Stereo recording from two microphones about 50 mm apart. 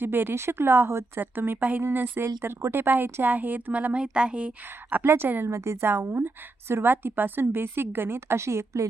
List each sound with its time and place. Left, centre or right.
0.0 s a woman's voice: right
1.2 s a woman's voice: right
5.0 s speech: right
5.5 s a woman's voice: right
5.8 s a woman's voice: right